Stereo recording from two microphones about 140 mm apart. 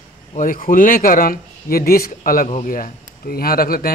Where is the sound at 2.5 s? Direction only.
70° left (ahead or behind); by 3.9 s 90° left.